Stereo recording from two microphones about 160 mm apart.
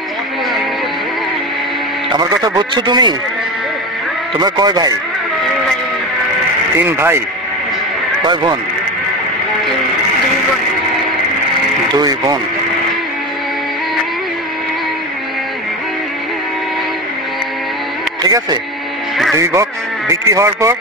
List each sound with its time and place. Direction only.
2.1 s speech: 25° right (ahead or behind)
4.4 s speech: 25° right (ahead or behind)
6.8 s speech: 15° right (ahead or behind)
8.3 s speech: 25° right (ahead or behind)
12.0 s speech: 25° right (ahead or behind)
18.2 s speech: 25° right (ahead or behind)